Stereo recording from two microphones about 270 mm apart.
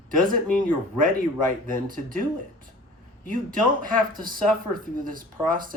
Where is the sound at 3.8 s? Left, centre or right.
Right.